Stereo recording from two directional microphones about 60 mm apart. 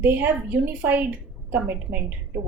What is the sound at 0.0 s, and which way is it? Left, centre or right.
A woman's voice, right.